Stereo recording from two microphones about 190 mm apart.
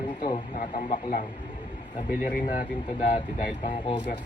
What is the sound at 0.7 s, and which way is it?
Speech, 30° left (ahead or behind).